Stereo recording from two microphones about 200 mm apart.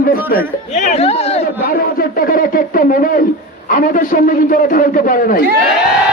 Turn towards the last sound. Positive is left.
turn(degrees=45)  # may be behind; listen again after turning